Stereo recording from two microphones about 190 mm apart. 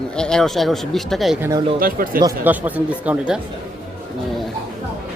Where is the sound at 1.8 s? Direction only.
50° right (ahead or behind).